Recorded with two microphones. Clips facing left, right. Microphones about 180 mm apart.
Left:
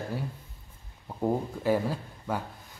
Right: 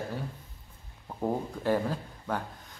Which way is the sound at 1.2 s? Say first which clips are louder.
Left 2 dB; 5° left (ahead or behind).